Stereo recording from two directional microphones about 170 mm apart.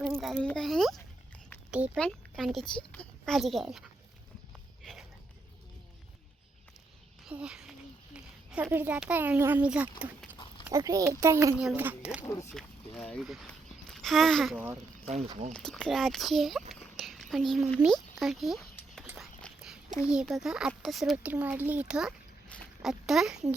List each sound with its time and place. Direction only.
0.2 s a child's voice: centre (ahead or behind)
4.8 s a sound: centre (ahead or behind)
7.3 s a child's voice: 5° right (ahead or behind)
10.7 s speech: 20° right (ahead or behind)
12.2 s speech: 20° left (ahead or behind)
12.5 s speech: 5° left (ahead or behind)
13.5 s a sound: centre (ahead or behind)
15.5 s a child's voice: 5° left (ahead or behind)
16.8 s a sound: centre (ahead or behind)
20.1 s a child's voice: 5° right (ahead or behind)